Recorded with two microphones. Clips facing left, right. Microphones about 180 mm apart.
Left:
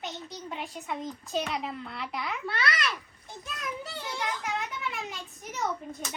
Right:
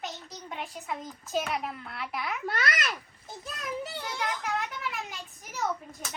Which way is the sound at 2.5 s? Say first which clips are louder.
Left 1 dB; 45° right (ahead or behind).